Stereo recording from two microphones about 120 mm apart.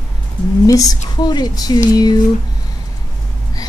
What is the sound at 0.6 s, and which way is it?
A woman's voice, 30° left (ahead or behind).